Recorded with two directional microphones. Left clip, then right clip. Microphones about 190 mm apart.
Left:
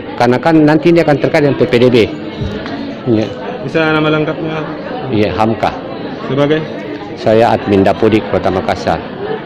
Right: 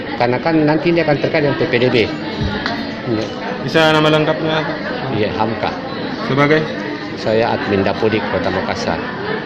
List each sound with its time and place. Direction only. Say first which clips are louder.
0.2 s speech: left 6 dB; 55° left (ahead or behind)
3.8 s a man's voice: even; centre (ahead or behind)
5.1 s a man's voice: left 6 dB; 55° left (ahead or behind)
7.3 s speech: left 6 dB; 55° left (ahead or behind)